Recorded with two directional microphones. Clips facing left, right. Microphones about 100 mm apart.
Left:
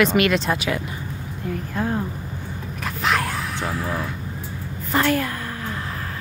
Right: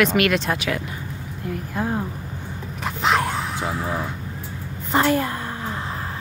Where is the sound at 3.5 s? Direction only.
20° right (ahead or behind).